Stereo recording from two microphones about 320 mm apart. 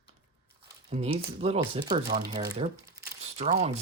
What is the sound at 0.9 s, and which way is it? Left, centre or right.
Speech, centre.